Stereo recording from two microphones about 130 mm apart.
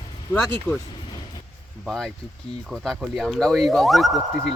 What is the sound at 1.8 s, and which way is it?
Speech, 5° left (ahead or behind).